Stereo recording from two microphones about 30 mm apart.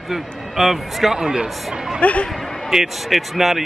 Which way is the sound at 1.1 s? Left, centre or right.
Right.